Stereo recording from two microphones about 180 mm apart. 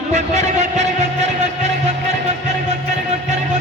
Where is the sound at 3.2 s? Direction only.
40° right (ahead or behind).